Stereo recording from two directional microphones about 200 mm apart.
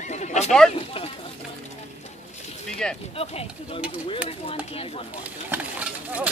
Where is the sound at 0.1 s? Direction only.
35° left (ahead or behind).